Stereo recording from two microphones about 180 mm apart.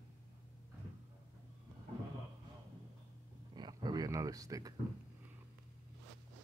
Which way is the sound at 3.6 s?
25° right (ahead or behind).